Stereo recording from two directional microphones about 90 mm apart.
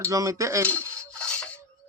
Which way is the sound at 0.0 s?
35° right (ahead or behind).